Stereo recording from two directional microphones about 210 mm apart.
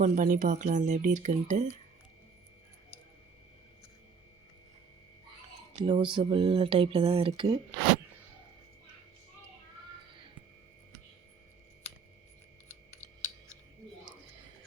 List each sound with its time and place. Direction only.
0.0 s speech: 35° right (ahead or behind)
5.7 s speech: 25° right (ahead or behind)